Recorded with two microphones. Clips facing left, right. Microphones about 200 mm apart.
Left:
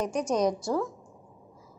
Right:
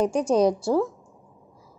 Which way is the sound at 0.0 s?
30° right (ahead or behind).